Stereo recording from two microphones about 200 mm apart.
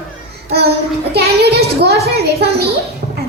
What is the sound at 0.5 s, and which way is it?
Child singing, 55° right (ahead or behind).